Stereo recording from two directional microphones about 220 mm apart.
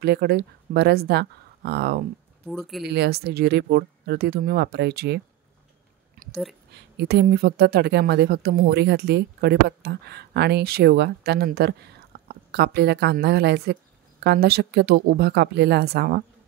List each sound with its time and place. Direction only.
0.0 s a woman's voice: 45° right (ahead or behind)
2.4 s speech: centre (ahead or behind)
2.8 s a woman's voice: 50° right (ahead or behind)
6.2 s a sound: 40° right (ahead or behind)
6.7 s a woman's voice: 50° right (ahead or behind)